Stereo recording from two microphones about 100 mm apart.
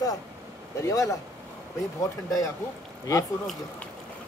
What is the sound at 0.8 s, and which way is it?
Speech, 30° left (ahead or behind).